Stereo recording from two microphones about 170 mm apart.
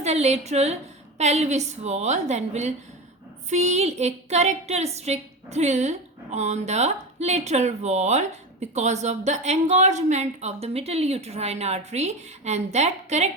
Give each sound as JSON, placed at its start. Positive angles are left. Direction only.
{"t": 0.0, "sound": "a woman's voice", "side_deg": -40}